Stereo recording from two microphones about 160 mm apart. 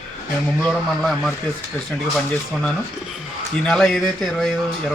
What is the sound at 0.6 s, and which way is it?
Speech, 5° left (ahead or behind).